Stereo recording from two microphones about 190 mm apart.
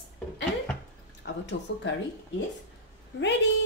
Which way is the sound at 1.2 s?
65° left (ahead or behind).